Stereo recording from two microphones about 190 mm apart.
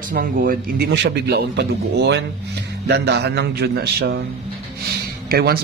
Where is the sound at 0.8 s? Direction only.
65° right (ahead or behind).